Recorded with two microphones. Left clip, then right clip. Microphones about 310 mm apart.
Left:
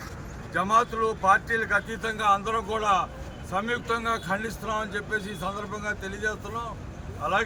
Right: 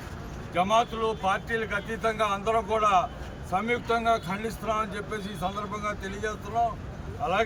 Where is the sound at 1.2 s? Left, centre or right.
Left.